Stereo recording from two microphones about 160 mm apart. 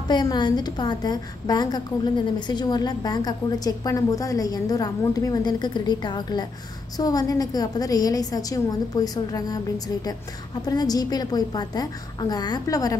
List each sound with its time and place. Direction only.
0.1 s a woman's voice: 25° left (ahead or behind)
10.6 s a woman's voice: 25° left (ahead or behind)